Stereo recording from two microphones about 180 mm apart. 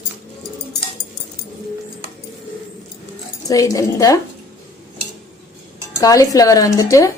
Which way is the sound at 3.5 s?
20° left (ahead or behind).